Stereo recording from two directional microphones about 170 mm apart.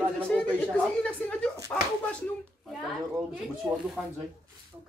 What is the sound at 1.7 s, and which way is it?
Slap, 20° left (ahead or behind).